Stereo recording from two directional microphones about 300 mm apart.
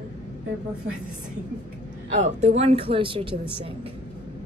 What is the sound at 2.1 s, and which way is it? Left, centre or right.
Speech, right.